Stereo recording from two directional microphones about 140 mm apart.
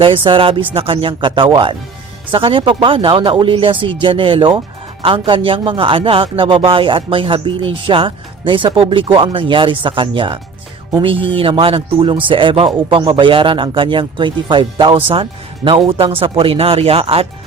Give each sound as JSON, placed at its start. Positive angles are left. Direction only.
{"t": 0.0, "sound": "speech", "side_deg": -40}